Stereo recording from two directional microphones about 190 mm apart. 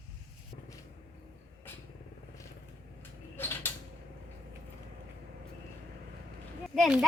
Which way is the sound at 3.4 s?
10° left (ahead or behind).